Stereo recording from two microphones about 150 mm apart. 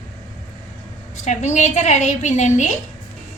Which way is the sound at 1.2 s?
50° left (ahead or behind).